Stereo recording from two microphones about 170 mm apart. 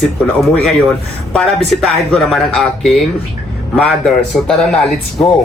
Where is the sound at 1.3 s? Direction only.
5° left (ahead or behind).